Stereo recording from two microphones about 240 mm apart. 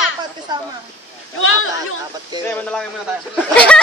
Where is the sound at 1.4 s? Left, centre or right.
Left.